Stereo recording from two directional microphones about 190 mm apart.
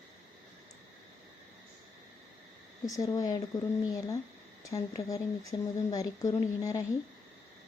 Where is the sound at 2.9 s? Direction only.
20° left (ahead or behind).